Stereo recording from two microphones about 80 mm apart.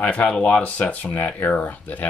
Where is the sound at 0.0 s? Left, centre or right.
Centre.